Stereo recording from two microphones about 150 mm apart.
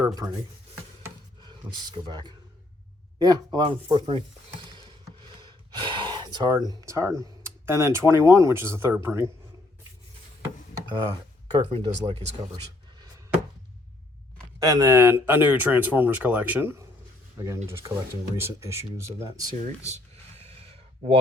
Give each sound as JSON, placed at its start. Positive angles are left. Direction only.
{"t": 0.0, "sound": "speech", "side_deg": -25}
{"t": 1.4, "sound": "speech", "side_deg": -30}
{"t": 4.6, "sound": "a sound", "side_deg": -30}
{"t": 7.2, "sound": "speech", "side_deg": -15}
{"t": 10.8, "sound": "knock", "side_deg": -25}
{"t": 11.5, "sound": "speech", "side_deg": -35}
{"t": 14.7, "sound": "speech", "side_deg": -25}